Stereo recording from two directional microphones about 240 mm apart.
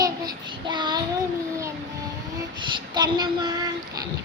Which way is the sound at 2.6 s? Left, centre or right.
Centre.